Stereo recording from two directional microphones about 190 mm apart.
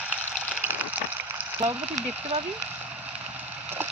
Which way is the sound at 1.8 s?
5° right (ahead or behind).